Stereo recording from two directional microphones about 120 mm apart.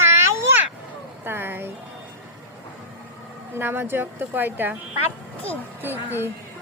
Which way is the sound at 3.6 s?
20° right (ahead or behind).